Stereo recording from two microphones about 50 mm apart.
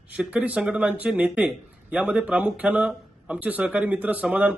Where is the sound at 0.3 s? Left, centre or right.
Right.